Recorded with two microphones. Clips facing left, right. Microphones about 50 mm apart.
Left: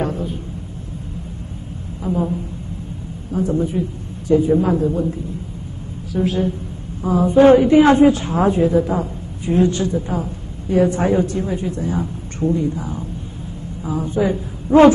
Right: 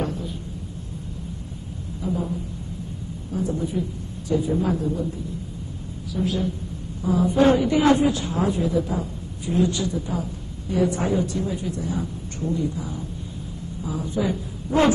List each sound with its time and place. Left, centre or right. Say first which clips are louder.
0.0 s a sound: left 5 dB; left
2.0 s a woman's voice: left 6 dB; left
3.3 s a woman's voice: left 6 dB; left
6.1 s a woman's voice: left 6 dB; left